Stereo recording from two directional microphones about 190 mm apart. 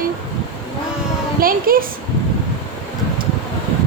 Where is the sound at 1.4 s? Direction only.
50° right (ahead or behind).